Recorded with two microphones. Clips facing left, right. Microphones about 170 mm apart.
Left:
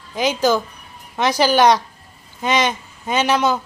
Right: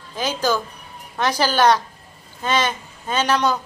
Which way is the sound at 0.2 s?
10° left (ahead or behind).